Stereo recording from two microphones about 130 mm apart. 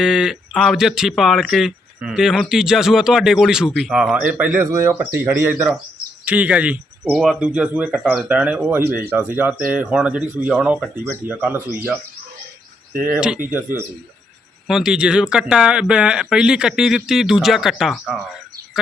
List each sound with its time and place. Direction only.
0.0 s speech: 5° right (ahead or behind)
13.0 s speech: 10° right (ahead or behind)
14.7 s speech: 5° right (ahead or behind)